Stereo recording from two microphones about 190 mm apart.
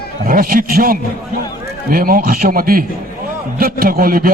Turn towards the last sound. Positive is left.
turn(degrees=-50)  # may be behind; listen again after turning